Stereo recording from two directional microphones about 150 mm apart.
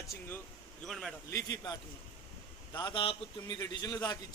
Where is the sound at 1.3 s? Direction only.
20° left (ahead or behind).